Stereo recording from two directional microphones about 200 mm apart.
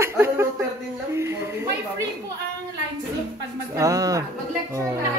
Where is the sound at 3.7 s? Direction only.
15° right (ahead or behind).